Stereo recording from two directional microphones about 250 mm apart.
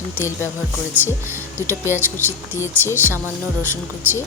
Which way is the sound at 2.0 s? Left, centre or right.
Centre.